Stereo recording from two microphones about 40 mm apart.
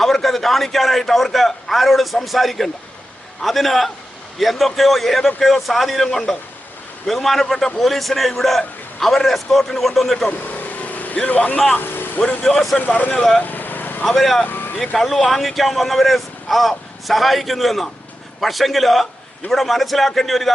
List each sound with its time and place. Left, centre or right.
0.0 s a man's voice: centre
10.8 s vehicle: left
11.3 s speech: left
11.8 s vehicle: left
12.5 s speech: centre
13.4 s vehicle: left
14.0 s speech: centre
14.4 s speech: left
14.8 s speech: centre